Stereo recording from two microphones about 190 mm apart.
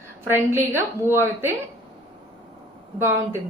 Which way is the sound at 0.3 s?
10° right (ahead or behind).